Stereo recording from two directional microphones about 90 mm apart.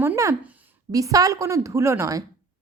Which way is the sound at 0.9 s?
40° right (ahead or behind).